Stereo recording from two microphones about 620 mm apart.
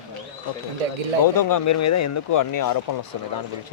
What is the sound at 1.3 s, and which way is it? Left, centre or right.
Speech, left.